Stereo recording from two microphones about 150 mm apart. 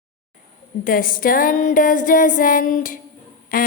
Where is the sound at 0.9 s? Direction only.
70° left (ahead or behind).